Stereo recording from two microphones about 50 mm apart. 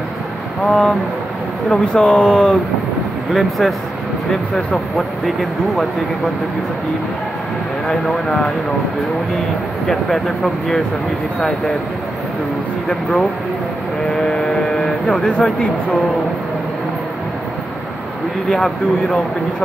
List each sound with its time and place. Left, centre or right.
0.7 s speech: centre
3.3 s speech: centre
4.3 s speech: centre
5.2 s speech: centre
7.9 s speech: centre
9.8 s speech: centre
12.8 s speech: centre
14.2 s vehicle: centre
15.4 s speech: centre
18.5 s speech: centre